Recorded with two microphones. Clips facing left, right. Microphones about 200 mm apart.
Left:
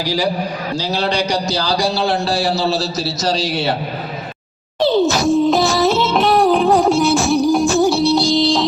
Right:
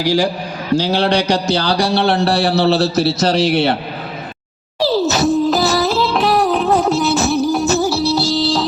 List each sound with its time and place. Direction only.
0.0 s a man's voice: 50° right (ahead or behind)
4.8 s music: centre (ahead or behind)